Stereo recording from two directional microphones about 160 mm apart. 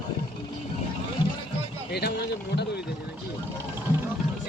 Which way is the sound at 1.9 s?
90° left.